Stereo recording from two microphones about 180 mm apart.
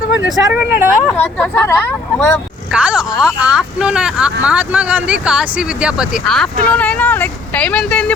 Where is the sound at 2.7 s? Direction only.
5° right (ahead or behind).